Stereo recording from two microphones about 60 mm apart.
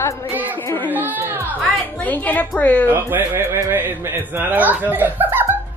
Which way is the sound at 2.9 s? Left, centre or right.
Right.